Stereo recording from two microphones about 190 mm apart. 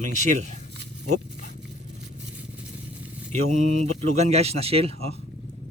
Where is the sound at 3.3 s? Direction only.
40° right (ahead or behind).